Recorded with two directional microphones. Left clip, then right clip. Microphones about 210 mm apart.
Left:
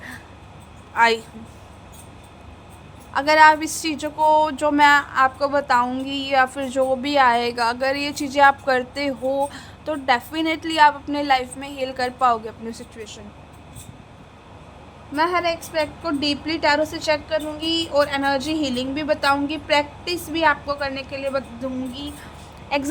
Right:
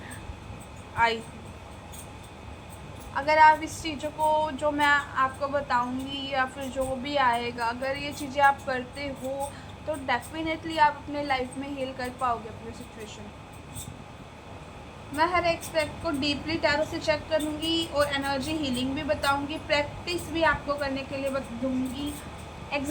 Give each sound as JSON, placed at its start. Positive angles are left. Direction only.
{"t": 0.9, "sound": "a woman's voice", "side_deg": 60}
{"t": 3.1, "sound": "a woman's voice", "side_deg": 55}
{"t": 15.1, "sound": "a woman's voice", "side_deg": 55}
{"t": 22.7, "sound": "a woman's voice", "side_deg": 55}